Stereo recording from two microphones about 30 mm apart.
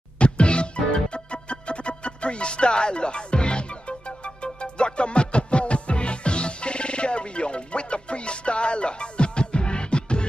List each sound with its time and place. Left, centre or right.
0.2 s music: left